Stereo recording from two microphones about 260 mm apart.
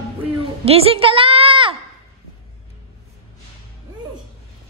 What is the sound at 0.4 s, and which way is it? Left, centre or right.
A woman's voice, right.